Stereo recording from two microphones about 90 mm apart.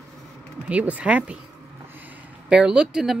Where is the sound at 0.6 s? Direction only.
15° right (ahead or behind).